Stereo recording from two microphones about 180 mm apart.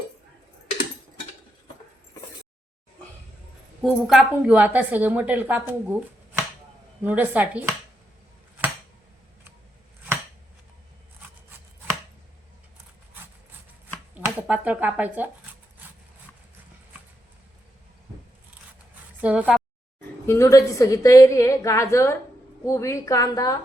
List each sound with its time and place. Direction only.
3.8 s a woman's voice: centre (ahead or behind)
7.0 s a woman's voice: 10° right (ahead or behind)
14.3 s speech: 10° right (ahead or behind)
19.2 s a woman's voice: 5° right (ahead or behind)
20.2 s a woman's voice: 15° left (ahead or behind)